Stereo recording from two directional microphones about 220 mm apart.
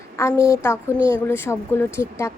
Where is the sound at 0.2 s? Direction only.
15° left (ahead or behind).